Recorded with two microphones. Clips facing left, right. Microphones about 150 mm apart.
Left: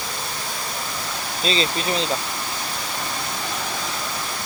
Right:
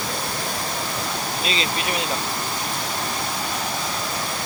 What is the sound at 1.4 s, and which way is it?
Speech, 30° left (ahead or behind).